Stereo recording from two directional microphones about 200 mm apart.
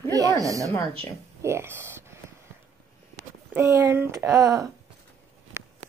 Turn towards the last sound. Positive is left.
turn(degrees=-20)  # may be behind; listen again after turning